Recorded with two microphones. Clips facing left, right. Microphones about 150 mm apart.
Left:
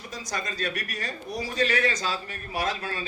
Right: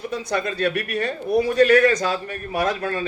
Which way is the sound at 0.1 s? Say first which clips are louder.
Right 7 dB; 60° right (ahead or behind).